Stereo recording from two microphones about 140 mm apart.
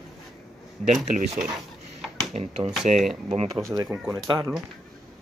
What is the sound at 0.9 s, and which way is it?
Speech, 65° right (ahead or behind).